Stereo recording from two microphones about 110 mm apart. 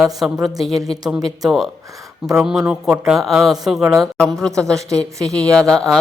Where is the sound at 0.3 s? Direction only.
35° right (ahead or behind).